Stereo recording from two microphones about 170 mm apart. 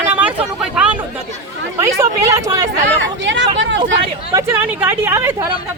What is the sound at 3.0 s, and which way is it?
Speech, 90° right.